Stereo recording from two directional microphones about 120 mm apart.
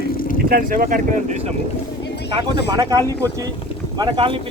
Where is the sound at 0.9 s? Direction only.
80° right.